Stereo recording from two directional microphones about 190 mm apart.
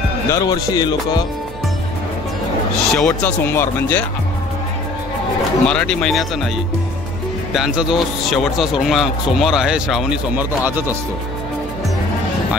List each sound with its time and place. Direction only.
0.3 s speech: 20° left (ahead or behind)
3.0 s speech: 5° left (ahead or behind)
5.7 s speech: 5° left (ahead or behind)
7.5 s speech: 5° right (ahead or behind)